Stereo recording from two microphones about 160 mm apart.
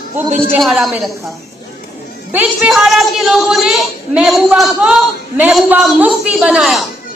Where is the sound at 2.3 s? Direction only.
10° right (ahead or behind).